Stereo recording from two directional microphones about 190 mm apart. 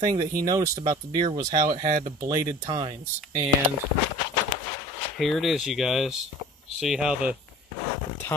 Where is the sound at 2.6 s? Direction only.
25° right (ahead or behind).